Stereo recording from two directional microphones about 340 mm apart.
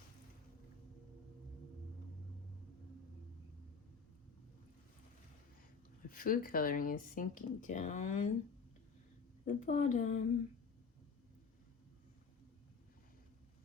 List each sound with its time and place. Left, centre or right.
6.1 s speech: left
9.4 s speech: left